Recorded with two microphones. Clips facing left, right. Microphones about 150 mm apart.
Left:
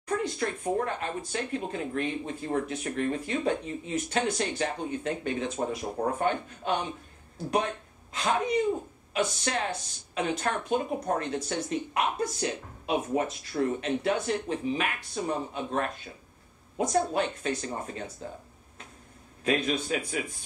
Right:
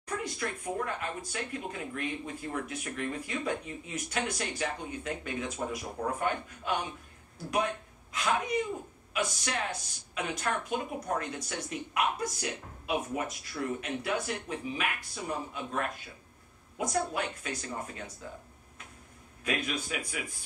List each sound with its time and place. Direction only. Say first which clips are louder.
0.2 s speech: left 5 dB; 30° left (ahead or behind)
19.4 s a man's voice: left 6 dB; 30° left (ahead or behind)